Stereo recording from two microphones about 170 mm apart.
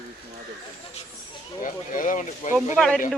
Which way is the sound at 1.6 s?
50° left (ahead or behind).